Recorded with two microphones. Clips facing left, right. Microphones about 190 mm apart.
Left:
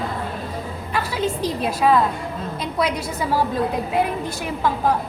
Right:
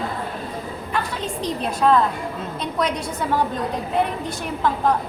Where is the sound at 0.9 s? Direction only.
5° left (ahead or behind).